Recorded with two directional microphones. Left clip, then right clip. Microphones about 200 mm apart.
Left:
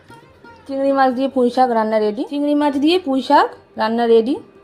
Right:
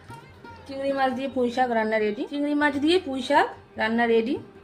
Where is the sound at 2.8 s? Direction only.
30° left (ahead or behind).